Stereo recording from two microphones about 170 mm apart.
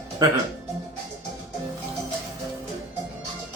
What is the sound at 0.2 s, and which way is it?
Speech, 20° right (ahead or behind).